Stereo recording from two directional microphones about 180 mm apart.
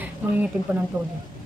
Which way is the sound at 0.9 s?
10° right (ahead or behind).